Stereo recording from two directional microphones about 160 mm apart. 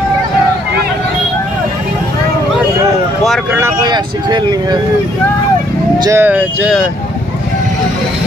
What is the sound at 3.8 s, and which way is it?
Speech, 25° right (ahead or behind).